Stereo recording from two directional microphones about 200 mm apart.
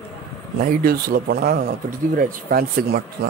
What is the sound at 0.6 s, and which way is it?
Speech, 45° right (ahead or behind).